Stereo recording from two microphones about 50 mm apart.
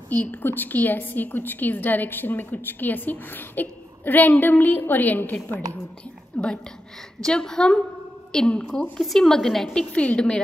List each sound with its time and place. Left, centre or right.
0.1 s a woman's voice: left
6.3 s a woman's voice: centre
9.0 s a woman's voice: centre
9.9 s a woman's voice: left